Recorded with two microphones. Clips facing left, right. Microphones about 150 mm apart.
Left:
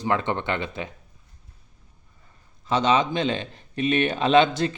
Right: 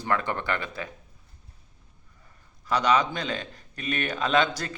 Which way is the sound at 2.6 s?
25° left (ahead or behind).